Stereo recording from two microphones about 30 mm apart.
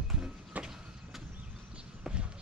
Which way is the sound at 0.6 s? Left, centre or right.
Centre.